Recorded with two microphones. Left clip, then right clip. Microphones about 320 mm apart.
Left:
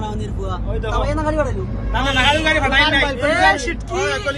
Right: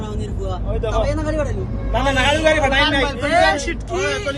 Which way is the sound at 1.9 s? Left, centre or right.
Centre.